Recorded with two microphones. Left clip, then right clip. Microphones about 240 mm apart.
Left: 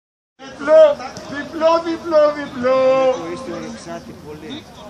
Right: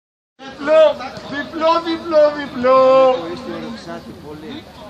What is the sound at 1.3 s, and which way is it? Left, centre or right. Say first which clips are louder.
A man's voice: even; right.